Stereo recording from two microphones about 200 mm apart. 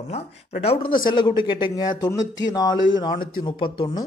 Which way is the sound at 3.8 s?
20° left (ahead or behind).